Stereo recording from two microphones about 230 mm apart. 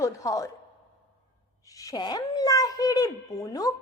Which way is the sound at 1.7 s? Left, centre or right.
Centre.